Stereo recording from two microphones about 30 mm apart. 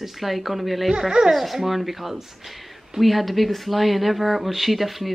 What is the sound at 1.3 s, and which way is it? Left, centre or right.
Speech, centre.